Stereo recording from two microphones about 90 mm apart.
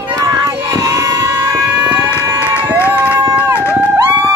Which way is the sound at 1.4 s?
35° right (ahead or behind).